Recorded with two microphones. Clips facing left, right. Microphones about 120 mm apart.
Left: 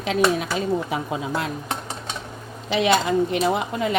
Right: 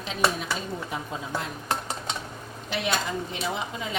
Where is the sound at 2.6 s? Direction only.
90° left; by 3.9 s 60° left (ahead or behind).